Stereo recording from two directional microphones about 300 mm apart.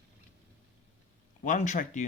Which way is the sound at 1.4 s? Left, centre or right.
Left.